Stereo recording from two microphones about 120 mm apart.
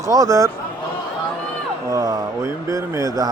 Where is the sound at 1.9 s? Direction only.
30° right (ahead or behind).